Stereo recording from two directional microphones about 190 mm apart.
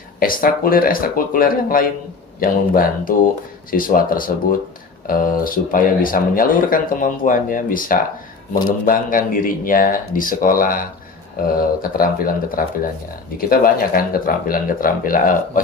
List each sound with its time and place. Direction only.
0.2 s speech: 50° left (ahead or behind)